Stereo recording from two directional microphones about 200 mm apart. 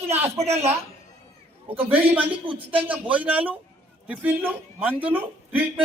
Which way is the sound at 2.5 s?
25° right (ahead or behind).